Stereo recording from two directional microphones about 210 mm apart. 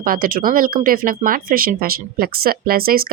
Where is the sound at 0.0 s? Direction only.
40° right (ahead or behind).